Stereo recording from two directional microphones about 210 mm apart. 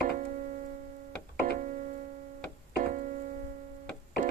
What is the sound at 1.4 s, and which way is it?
Keyboard, 40° right (ahead or behind).